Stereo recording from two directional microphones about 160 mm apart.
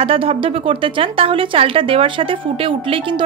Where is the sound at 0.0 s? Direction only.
35° right (ahead or behind).